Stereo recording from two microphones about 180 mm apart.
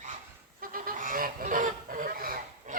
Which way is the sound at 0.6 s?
50° right (ahead or behind).